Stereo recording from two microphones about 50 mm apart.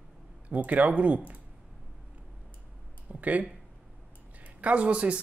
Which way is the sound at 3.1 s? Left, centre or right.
Right.